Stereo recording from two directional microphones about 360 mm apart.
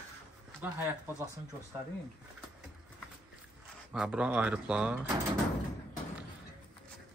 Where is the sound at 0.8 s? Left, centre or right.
Centre.